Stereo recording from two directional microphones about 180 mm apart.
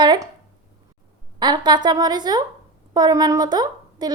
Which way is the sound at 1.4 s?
25° right (ahead or behind).